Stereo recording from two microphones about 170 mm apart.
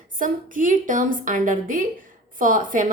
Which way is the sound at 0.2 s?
50° right (ahead or behind).